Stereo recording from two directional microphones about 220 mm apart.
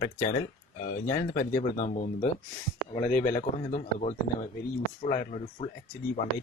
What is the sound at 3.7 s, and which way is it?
Speech, 30° left (ahead or behind).